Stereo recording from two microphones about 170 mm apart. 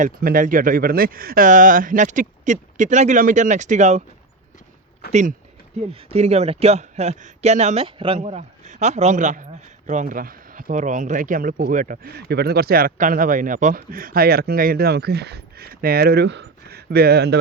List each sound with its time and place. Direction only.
0.0 s speech: 55° right (ahead or behind)
5.0 s speech: 70° left (ahead or behind)
5.9 s a man's voice: 35° right (ahead or behind)
8.2 s speech: 45° right (ahead or behind); by 17.4 s 75° right (ahead or behind)